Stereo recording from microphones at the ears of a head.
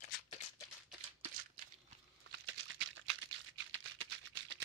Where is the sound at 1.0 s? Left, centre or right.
Right.